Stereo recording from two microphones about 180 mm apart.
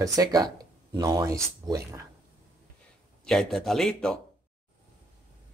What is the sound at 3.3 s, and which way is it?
Speech, centre (ahead or behind).